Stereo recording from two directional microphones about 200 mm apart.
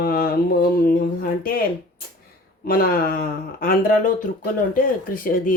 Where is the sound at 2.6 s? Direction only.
45° left (ahead or behind).